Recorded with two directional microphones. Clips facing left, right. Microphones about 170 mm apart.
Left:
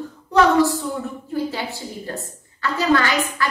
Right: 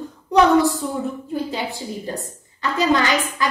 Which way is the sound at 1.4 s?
15° right (ahead or behind).